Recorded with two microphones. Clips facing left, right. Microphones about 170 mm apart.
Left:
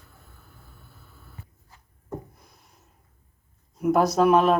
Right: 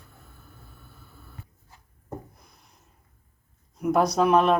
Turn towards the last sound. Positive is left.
turn(degrees=0)  # may be behind; listen again after turning